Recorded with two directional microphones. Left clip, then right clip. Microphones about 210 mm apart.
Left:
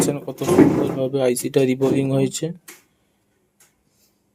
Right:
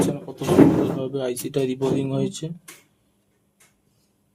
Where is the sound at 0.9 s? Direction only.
30° left (ahead or behind).